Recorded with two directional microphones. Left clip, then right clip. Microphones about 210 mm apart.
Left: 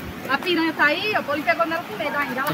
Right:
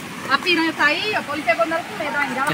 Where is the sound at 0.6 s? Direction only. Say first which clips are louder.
Right 1 dB; 10° right (ahead or behind).